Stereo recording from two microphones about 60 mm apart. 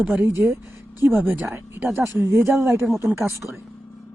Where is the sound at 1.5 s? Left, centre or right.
Right.